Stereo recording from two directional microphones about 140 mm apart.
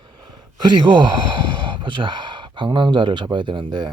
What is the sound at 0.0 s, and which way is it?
Speech, 35° right (ahead or behind).